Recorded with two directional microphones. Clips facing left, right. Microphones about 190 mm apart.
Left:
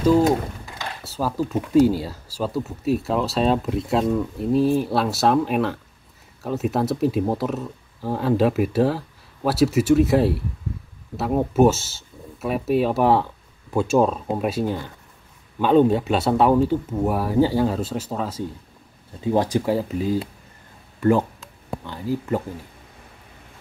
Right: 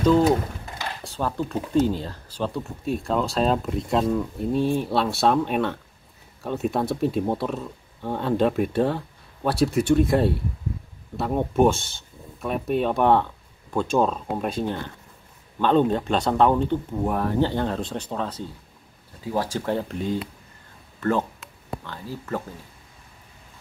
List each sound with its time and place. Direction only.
1.0 s a sound: 5° left (ahead or behind)
1.9 s speech: 10° left (ahead or behind)
19.2 s speech: 20° left (ahead or behind)
19.7 s speech: 5° left (ahead or behind)